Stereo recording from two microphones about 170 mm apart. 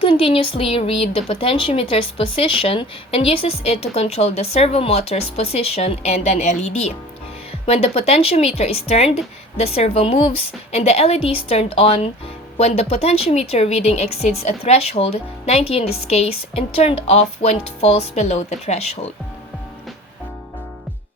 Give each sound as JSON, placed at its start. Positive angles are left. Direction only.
{"t": 0.0, "sound": "speech", "side_deg": 35}